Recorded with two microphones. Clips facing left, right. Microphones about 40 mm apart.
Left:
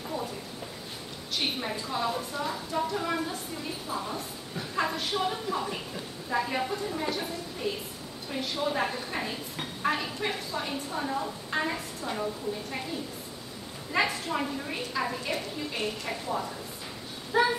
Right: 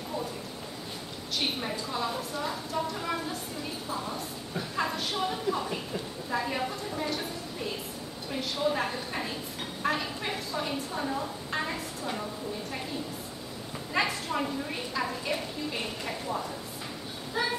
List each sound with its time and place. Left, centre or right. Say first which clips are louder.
1.3 s a woman's voice: even; centre
8.3 s a woman's voice: right 1 dB; centre
13.9 s a woman's voice: left 1 dB; centre
17.3 s child singing: left 6 dB; centre